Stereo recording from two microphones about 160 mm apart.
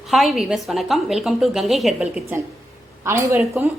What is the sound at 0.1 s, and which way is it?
A woman's voice, centre (ahead or behind).